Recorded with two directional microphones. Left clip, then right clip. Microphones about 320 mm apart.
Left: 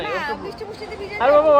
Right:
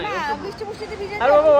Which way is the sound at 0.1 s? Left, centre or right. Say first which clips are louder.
Right 1 dB; centre.